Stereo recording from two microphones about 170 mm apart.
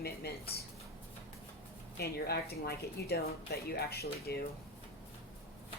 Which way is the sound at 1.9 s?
70° left (ahead or behind).